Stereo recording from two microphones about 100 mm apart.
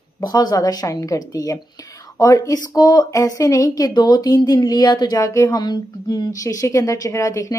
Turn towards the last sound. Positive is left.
turn(degrees=30)  # may be behind; listen again after turning